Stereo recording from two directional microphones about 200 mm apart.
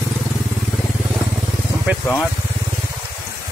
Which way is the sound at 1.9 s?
10° right (ahead or behind).